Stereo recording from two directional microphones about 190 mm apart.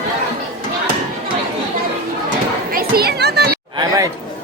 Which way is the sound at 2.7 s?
50° right (ahead or behind).